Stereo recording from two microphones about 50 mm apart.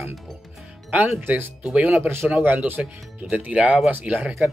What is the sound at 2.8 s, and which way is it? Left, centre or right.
Speech, centre.